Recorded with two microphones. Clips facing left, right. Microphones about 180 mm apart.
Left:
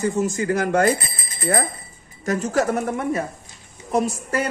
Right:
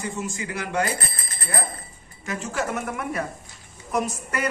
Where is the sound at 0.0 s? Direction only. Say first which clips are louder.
Left 9 dB; 40° left (ahead or behind).